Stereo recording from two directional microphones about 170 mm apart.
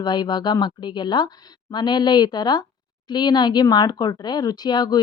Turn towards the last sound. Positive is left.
turn(degrees=25)  # may be behind; listen again after turning